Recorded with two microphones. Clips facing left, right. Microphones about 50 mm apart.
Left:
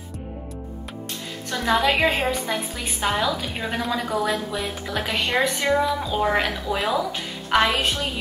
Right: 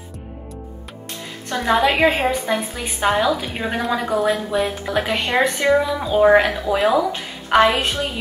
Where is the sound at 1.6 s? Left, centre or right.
Centre.